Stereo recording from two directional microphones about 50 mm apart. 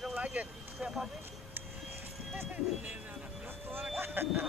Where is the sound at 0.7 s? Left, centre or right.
Centre.